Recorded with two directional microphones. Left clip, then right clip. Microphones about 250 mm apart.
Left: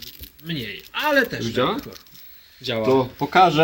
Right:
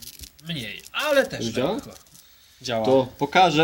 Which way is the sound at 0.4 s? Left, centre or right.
Right.